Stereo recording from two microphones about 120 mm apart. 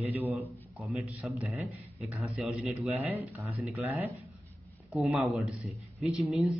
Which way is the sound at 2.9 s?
15° right (ahead or behind).